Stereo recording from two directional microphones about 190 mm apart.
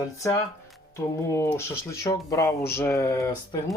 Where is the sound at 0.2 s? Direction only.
15° left (ahead or behind).